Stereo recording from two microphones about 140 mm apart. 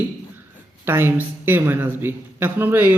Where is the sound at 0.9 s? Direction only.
15° right (ahead or behind).